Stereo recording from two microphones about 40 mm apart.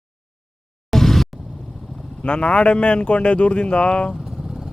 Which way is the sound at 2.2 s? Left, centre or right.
Left.